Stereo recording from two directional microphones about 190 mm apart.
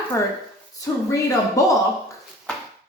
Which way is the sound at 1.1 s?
15° left (ahead or behind).